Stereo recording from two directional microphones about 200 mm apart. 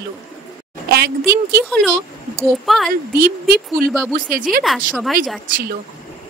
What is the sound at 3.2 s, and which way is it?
Speech, 50° right (ahead or behind).